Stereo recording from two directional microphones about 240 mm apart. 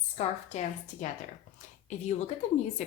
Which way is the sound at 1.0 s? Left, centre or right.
Left.